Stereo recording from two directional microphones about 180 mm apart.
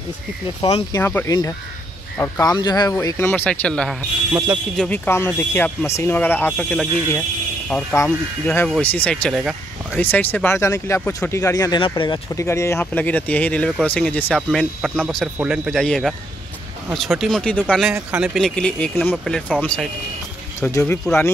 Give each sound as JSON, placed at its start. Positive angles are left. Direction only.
{"t": 0.6, "sound": "speech", "side_deg": 35}
{"t": 0.9, "sound": "speech", "side_deg": 15}